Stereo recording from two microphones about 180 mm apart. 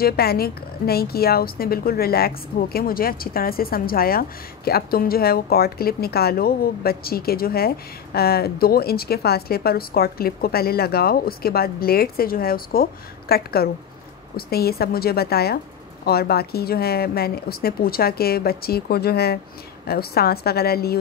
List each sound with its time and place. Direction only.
0.0 s a woman's voice: 60° left (ahead or behind)